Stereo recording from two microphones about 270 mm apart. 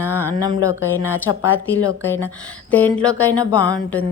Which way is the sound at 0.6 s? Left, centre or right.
Left.